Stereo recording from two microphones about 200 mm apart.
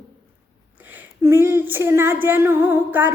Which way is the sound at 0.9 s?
10° right (ahead or behind).